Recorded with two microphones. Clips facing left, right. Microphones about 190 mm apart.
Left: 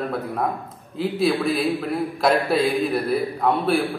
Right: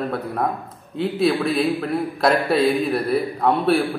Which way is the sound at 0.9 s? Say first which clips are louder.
Right 1 dB; centre (ahead or behind).